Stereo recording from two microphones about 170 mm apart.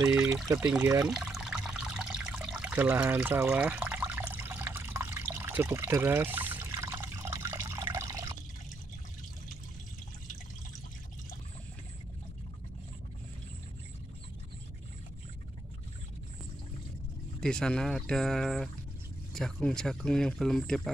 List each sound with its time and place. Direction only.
0.0 s speech: 20° right (ahead or behind)
1.1 s water: 5° right (ahead or behind); by 8.3 s 20° right (ahead or behind)
17.4 s speech: 5° left (ahead or behind)